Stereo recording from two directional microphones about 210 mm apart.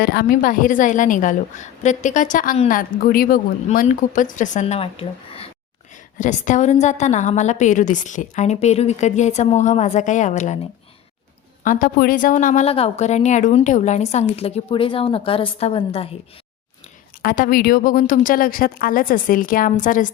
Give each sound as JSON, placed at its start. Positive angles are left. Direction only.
{"t": 0.0, "sound": "a woman's voice", "side_deg": 50}
{"t": 11.6, "sound": "a woman's voice", "side_deg": 40}
{"t": 17.2, "sound": "a woman's voice", "side_deg": 40}